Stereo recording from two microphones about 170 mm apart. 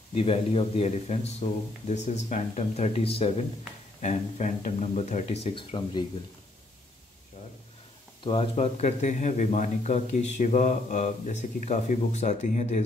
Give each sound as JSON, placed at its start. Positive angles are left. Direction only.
{"t": 0.1, "sound": "speech", "side_deg": 35}
{"t": 4.0, "sound": "speech", "side_deg": 45}
{"t": 8.2, "sound": "speech", "side_deg": 35}